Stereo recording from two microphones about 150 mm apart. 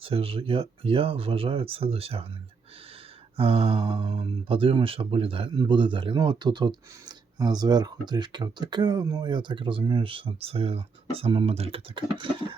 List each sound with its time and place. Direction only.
0.0 s speech: 40° right (ahead or behind)
3.3 s speech: 40° right (ahead or behind)